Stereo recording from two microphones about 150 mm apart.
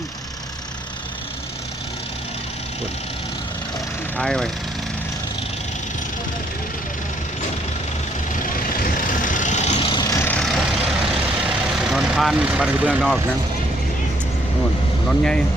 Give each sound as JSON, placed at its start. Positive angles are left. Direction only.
{"t": 4.2, "sound": "speech", "side_deg": 5}
{"t": 8.4, "sound": "vehicle", "side_deg": 65}
{"t": 9.8, "sound": "vehicle", "side_deg": 25}
{"t": 10.2, "sound": "vehicle", "side_deg": 5}
{"t": 11.8, "sound": "speech", "side_deg": 0}
{"t": 15.0, "sound": "speech", "side_deg": 5}